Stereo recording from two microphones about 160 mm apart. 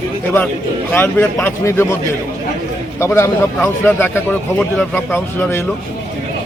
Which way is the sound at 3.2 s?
15° left (ahead or behind).